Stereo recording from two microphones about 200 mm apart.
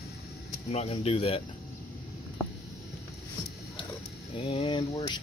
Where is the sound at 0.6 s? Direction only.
30° left (ahead or behind).